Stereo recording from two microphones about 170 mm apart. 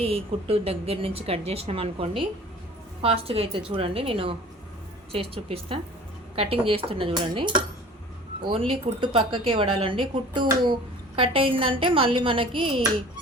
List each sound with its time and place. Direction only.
0.0 s speech: 35° right (ahead or behind)